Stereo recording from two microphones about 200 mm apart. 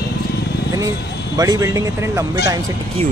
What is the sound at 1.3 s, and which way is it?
Speech, 20° right (ahead or behind).